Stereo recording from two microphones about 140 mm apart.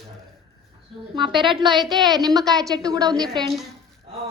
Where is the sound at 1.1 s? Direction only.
35° right (ahead or behind).